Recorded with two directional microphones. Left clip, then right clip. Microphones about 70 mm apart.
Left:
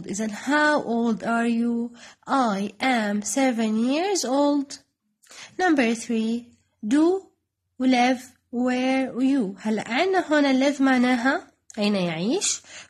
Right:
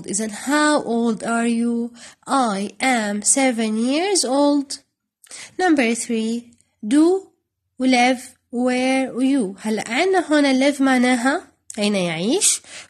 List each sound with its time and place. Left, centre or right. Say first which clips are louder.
0.0 s a woman's voice: right 3 dB; centre
7.8 s speech: right 4 dB; centre